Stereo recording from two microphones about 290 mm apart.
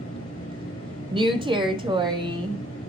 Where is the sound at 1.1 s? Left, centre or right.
Centre.